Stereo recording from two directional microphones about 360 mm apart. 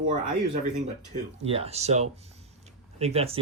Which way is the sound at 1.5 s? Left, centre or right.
Centre.